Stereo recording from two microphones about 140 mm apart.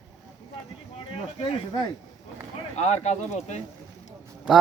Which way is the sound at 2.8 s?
55° left (ahead or behind).